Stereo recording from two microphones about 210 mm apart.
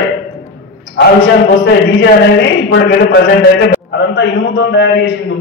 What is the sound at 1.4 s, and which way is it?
A man's voice, 55° left (ahead or behind).